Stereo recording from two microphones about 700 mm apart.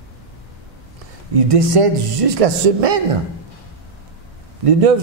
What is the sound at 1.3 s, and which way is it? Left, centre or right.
A man's voice, right.